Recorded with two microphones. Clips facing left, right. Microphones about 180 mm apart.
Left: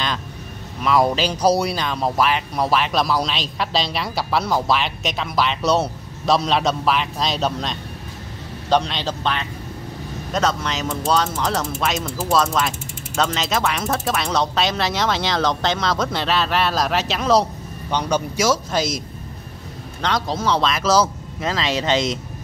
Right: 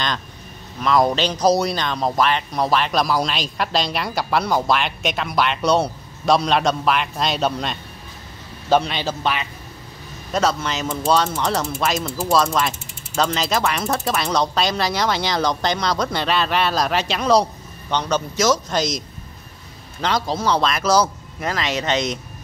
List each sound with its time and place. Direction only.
0.8 s a man's voice: 5° left (ahead or behind)
21.4 s speech: 25° left (ahead or behind)